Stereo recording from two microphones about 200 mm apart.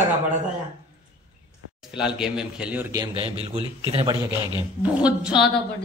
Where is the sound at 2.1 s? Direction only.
5° right (ahead or behind).